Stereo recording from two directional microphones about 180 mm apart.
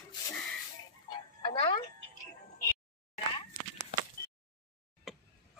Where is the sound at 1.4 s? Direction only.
30° left (ahead or behind).